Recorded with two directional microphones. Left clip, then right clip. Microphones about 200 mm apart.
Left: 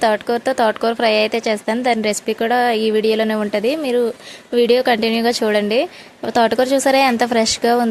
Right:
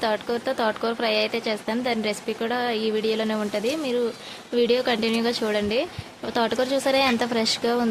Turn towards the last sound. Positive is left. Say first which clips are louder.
# left 8 dB
turn(degrees=30)  # may be behind; listen again after turning